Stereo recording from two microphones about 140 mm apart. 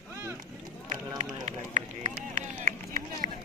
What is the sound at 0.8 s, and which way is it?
Run, 55° right (ahead or behind).